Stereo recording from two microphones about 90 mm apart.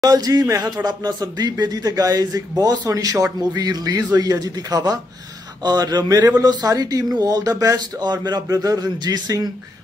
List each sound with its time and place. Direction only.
0.0 s speech: 45° right (ahead or behind)